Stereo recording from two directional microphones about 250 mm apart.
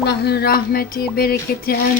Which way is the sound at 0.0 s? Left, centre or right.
Left.